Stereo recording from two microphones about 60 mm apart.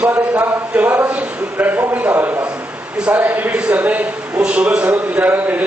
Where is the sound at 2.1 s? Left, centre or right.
Right.